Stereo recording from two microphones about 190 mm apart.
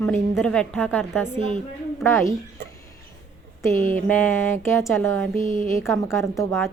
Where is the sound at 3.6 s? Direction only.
10° left (ahead or behind).